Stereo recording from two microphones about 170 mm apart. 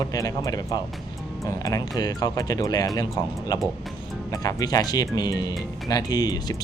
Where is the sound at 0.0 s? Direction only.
20° left (ahead or behind).